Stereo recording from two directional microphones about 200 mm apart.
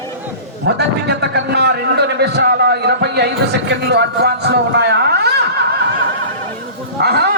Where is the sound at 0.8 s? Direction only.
55° right (ahead or behind).